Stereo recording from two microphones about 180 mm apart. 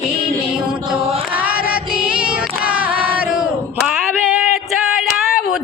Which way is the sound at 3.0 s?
10° right (ahead or behind).